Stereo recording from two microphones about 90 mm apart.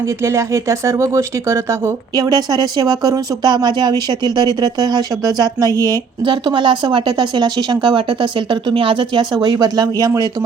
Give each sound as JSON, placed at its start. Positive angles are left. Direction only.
{"t": 0.2, "sound": "speech", "side_deg": -30}
{"t": 2.1, "sound": "speech", "side_deg": -45}
{"t": 6.2, "sound": "speech", "side_deg": -60}